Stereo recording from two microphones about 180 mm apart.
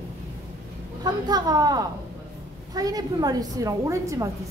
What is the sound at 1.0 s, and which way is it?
A woman's voice, 20° right (ahead or behind).